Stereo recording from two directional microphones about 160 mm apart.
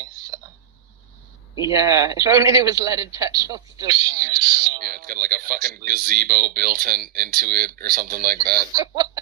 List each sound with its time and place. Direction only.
1.6 s a man's voice: 20° right (ahead or behind)
4.8 s speech: 65° right (ahead or behind)
8.7 s a man's voice: 20° right (ahead or behind)